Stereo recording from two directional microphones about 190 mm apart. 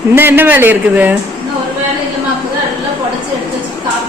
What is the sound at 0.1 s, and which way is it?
A man's voice, 10° right (ahead or behind).